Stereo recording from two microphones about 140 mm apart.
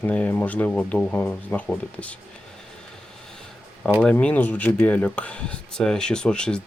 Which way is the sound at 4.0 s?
10° left (ahead or behind).